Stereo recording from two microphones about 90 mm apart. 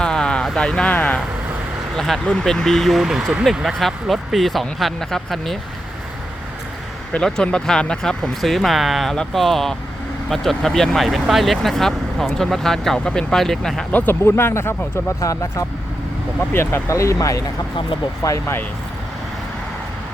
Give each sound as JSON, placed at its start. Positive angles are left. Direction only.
{"t": 0.0, "sound": "a sound", "side_deg": 10}
{"t": 0.9, "sound": "speech", "side_deg": 15}
{"t": 2.0, "sound": "speech", "side_deg": 5}
{"t": 7.1, "sound": "speech", "side_deg": 5}
{"t": 13.9, "sound": "speech", "side_deg": 20}
{"t": 15.2, "sound": "speech", "side_deg": 40}
{"t": 16.5, "sound": "speech", "side_deg": 25}